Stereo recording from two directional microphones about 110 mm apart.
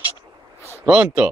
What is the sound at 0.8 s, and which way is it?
Speech, 15° right (ahead or behind).